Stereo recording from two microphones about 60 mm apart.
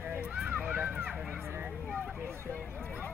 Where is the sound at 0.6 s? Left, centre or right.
Right.